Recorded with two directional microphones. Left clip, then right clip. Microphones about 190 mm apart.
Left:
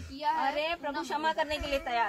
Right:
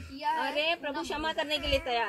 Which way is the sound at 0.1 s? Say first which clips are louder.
Even; 5° right (ahead or behind).